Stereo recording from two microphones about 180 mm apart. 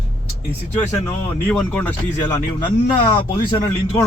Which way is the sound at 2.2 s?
25° left (ahead or behind).